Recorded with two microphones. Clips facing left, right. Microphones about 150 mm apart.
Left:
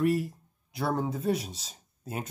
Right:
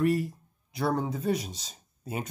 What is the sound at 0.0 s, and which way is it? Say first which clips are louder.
Speech: right 1 dB; centre (ahead or behind).